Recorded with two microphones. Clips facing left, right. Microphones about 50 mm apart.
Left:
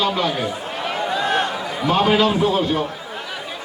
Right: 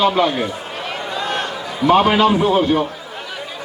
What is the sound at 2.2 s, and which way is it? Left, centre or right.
Speech, centre.